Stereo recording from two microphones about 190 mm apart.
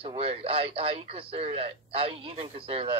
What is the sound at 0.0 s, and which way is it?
A man's voice, 30° right (ahead or behind).